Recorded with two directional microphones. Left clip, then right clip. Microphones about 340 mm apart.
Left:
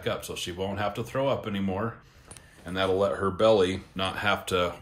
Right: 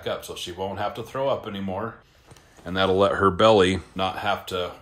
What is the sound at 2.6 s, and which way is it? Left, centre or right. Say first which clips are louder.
Speech: right 5 dB; right.